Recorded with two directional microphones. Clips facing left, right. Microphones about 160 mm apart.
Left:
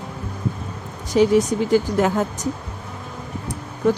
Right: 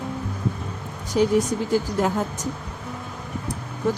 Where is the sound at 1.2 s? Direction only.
90° left.